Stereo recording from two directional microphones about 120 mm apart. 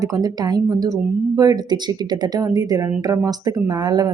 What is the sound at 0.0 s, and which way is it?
Speech, 30° right (ahead or behind).